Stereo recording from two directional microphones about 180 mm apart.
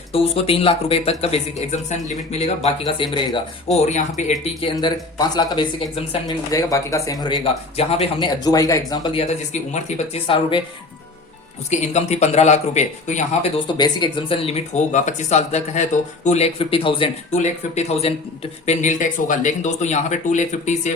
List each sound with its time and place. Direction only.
0.1 s speech: 30° left (ahead or behind)
2.8 s speech: 25° left (ahead or behind)
3.8 s speech: 40° left (ahead or behind)
4.7 s speech: 20° left (ahead or behind)
6.0 s speech: 30° left (ahead or behind)
6.5 s speech: 20° left (ahead or behind)
7.8 s speech: 35° left (ahead or behind)
8.2 s speech: 20° left (ahead or behind)
9.2 s speech: 40° left (ahead or behind)
11.7 s speech: 40° left (ahead or behind)
13.7 s speech: 25° left (ahead or behind); by 20.9 s 40° left (ahead or behind)